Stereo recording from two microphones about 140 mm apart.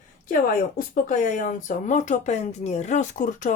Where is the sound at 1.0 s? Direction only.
65° left (ahead or behind).